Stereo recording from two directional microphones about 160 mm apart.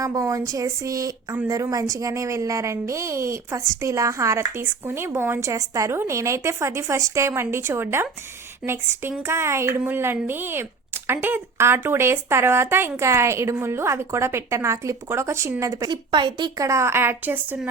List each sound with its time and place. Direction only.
0.0 s a woman's voice: 20° right (ahead or behind)